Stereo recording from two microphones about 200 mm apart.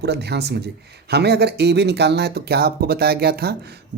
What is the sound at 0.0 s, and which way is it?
A man's voice, 55° right (ahead or behind).